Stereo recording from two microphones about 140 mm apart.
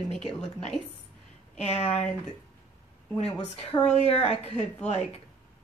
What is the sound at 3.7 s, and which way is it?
Speech, 30° left (ahead or behind).